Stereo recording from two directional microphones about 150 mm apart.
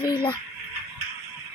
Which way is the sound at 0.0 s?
30° left (ahead or behind).